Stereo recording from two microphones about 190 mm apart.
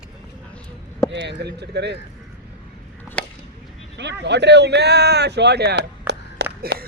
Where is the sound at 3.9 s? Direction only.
65° right (ahead or behind).